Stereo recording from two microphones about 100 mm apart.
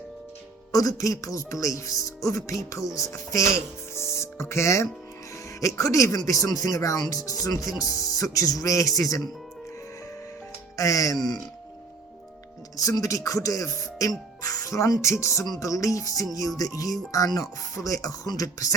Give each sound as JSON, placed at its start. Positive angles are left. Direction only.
{"t": 0.7, "sound": "speech", "side_deg": 35}
{"t": 3.9, "sound": "music", "side_deg": 25}
{"t": 5.5, "sound": "speech", "side_deg": 30}
{"t": 10.8, "sound": "speech", "side_deg": 35}
{"t": 12.7, "sound": "speech", "side_deg": 35}